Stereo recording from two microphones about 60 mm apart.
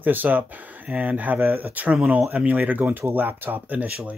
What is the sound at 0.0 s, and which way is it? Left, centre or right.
Speech, right.